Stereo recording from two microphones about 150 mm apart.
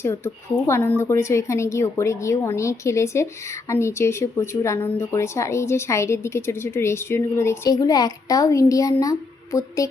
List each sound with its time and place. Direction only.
0.7 s a woman's voice: 15° left (ahead or behind)